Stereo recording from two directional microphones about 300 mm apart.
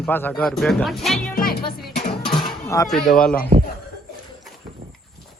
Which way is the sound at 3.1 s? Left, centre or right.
Centre.